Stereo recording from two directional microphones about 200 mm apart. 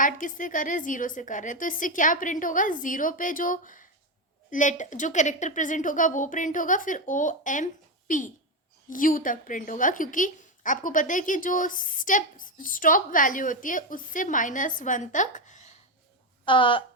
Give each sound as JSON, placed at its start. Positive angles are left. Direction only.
{"t": 0.0, "sound": "a woman's voice", "side_deg": 40}
{"t": 16.5, "sound": "speech", "side_deg": 25}